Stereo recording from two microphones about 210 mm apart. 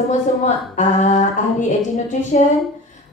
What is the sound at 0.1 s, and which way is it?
Speech, 35° left (ahead or behind).